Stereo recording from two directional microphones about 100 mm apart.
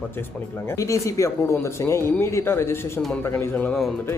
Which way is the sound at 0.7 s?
30° left (ahead or behind).